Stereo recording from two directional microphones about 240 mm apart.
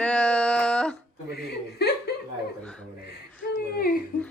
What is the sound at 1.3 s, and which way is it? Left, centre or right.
Chuckle, left.